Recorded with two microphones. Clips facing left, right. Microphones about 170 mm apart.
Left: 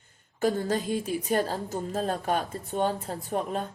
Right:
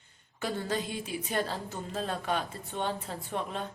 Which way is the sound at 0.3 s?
40° left (ahead or behind).